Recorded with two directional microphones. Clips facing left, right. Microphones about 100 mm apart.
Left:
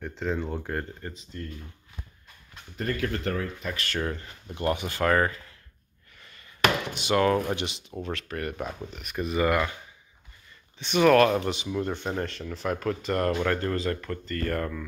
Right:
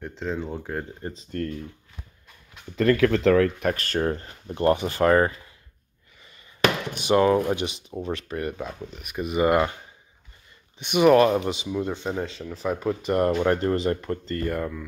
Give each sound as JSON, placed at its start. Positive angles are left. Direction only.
{"t": 0.1, "sound": "speech", "side_deg": 0}
{"t": 1.3, "sound": "speech", "side_deg": -65}
{"t": 2.7, "sound": "speech", "side_deg": -90}
{"t": 3.7, "sound": "speech", "side_deg": -40}
{"t": 7.1, "sound": "speech", "side_deg": -20}
{"t": 8.5, "sound": "speech", "side_deg": 10}
{"t": 9.0, "sound": "speech", "side_deg": -10}
{"t": 10.8, "sound": "speech", "side_deg": -15}
{"t": 14.5, "sound": "speech", "side_deg": -5}